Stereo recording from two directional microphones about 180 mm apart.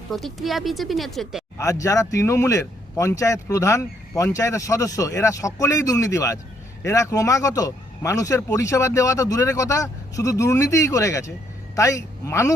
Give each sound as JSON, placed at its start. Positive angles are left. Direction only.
{"t": 0.1, "sound": "speech", "side_deg": 0}
{"t": 1.5, "sound": "speech", "side_deg": 15}